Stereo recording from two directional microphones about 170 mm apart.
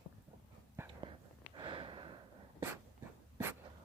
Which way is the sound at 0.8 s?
30° right (ahead or behind).